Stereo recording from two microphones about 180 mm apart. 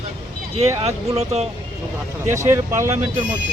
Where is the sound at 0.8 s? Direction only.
35° right (ahead or behind).